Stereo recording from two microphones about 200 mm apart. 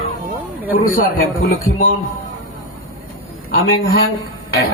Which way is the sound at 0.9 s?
45° left (ahead or behind).